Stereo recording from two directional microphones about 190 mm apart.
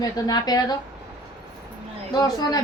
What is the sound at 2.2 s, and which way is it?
Speech, 20° left (ahead or behind).